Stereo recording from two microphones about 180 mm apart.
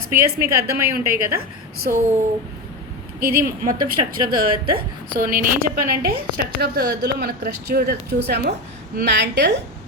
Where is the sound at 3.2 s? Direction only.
50° right (ahead or behind).